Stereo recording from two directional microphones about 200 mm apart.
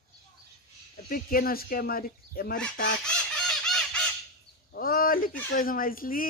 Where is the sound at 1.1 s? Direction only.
45° left (ahead or behind).